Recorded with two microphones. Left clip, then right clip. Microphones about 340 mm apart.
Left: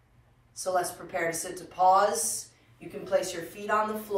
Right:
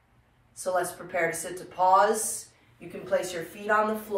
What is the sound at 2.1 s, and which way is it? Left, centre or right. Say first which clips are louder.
Speech: right 3 dB; centre.